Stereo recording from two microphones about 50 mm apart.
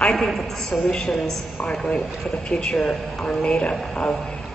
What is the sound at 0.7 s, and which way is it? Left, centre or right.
A man's voice, centre.